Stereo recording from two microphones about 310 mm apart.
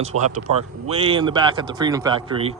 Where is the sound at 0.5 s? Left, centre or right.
Right.